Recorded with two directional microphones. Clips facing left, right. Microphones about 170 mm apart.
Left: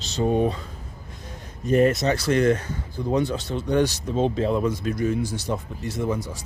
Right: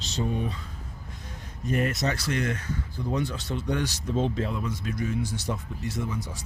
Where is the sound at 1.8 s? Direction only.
25° left (ahead or behind).